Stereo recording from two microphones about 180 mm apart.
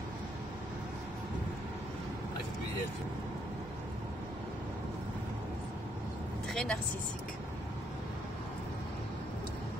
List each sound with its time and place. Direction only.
6.5 s vehicle: 5° left (ahead or behind)